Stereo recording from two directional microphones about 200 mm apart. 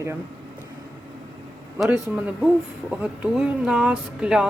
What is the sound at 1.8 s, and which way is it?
Speech, 5° right (ahead or behind).